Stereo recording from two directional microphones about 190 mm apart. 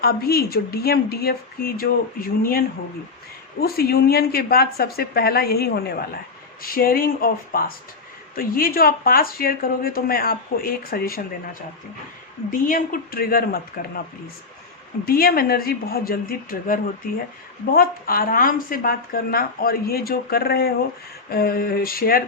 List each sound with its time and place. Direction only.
0.0 s speech: 55° left (ahead or behind)
12.5 s speech: 45° left (ahead or behind)
15.0 s speech: 50° left (ahead or behind)